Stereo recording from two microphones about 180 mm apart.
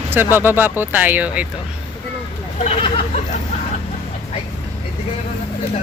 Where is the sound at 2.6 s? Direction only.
30° left (ahead or behind).